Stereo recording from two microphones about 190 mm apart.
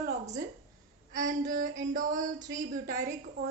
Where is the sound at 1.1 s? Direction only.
40° right (ahead or behind).